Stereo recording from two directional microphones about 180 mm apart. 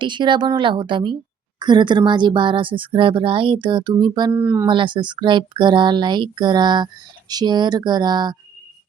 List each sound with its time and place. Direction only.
0.0 s speech: 25° right (ahead or behind)
4.3 s speech: 15° right (ahead or behind)
4.6 s speech: 25° right (ahead or behind)